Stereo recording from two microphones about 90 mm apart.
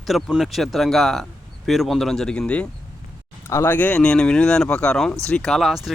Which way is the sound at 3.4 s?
30° left (ahead or behind).